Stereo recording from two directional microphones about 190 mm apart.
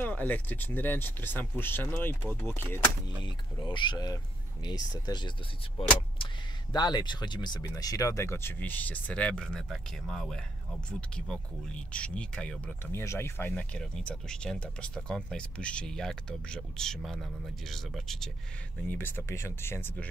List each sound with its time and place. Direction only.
0.0 s speech: 10° left (ahead or behind)
3.3 s speech: 25° left (ahead or behind)
6.2 s a sound: 25° left (ahead or behind)
6.7 s speech: 20° left (ahead or behind)